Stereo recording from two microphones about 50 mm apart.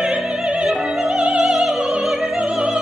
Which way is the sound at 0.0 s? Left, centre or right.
Centre.